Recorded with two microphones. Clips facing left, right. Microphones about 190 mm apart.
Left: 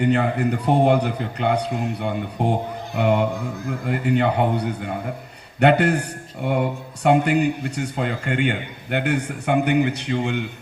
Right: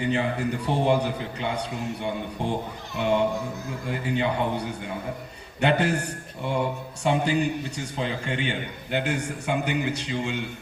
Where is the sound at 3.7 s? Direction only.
60° left (ahead or behind).